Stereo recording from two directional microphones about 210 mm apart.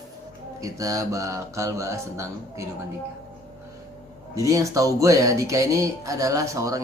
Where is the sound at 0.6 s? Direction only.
15° right (ahead or behind).